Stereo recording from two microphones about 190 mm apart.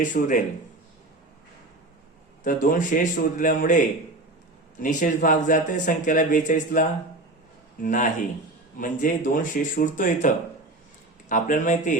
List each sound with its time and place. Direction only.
0.1 s speech: 45° left (ahead or behind)
2.4 s speech: 45° left (ahead or behind)